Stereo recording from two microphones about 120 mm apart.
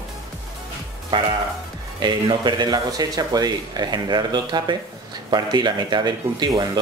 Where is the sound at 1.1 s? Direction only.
40° right (ahead or behind).